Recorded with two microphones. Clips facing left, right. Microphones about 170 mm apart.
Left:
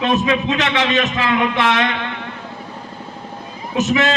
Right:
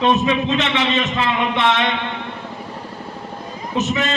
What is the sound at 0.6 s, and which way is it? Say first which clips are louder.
Speech: left 1 dB; 75° left (ahead or behind).